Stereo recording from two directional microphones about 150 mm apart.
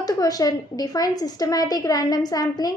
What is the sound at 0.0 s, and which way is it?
A woman's voice, 25° left (ahead or behind).